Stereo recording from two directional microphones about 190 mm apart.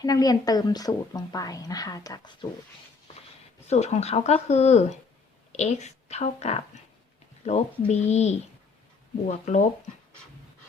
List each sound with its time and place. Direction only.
0.0 s a woman's voice: 20° left (ahead or behind)
3.7 s a woman's voice: 35° left (ahead or behind)